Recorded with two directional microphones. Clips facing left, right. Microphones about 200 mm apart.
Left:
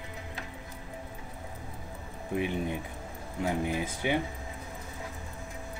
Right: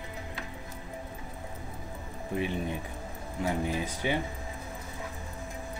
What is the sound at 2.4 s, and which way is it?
Speech, 15° left (ahead or behind).